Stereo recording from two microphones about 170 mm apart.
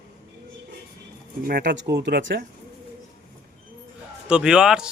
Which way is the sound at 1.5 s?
75° right (ahead or behind).